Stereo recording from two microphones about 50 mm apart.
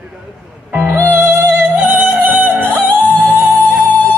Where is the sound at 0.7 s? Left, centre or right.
Right.